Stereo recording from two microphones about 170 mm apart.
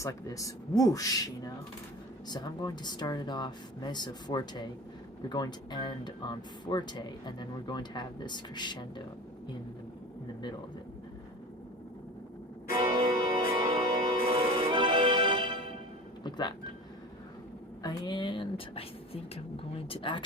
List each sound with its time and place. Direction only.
0.0 s speech: 20° left (ahead or behind)
2.3 s speech: 25° left (ahead or behind)
12.7 s music: 30° right (ahead or behind)
16.2 s music: 25° left (ahead or behind)
17.8 s a sound: 25° left (ahead or behind)
19.9 s speech: 30° left (ahead or behind)